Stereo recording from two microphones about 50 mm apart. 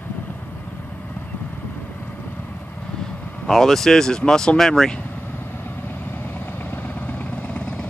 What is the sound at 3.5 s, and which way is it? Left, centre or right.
Speech, centre.